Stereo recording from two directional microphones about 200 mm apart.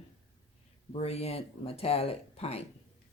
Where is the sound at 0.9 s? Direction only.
30° left (ahead or behind).